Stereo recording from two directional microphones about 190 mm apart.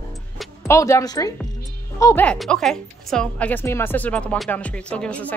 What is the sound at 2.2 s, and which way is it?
A woman's voice, centre (ahead or behind).